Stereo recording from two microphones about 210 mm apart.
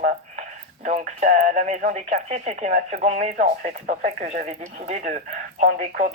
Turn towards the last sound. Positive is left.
turn(degrees=-40)  # may be behind; listen again after turning